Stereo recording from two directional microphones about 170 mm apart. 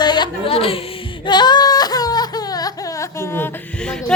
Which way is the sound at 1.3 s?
25° left (ahead or behind).